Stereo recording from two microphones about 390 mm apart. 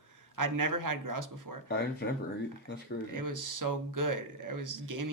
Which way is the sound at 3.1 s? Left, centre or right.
Right.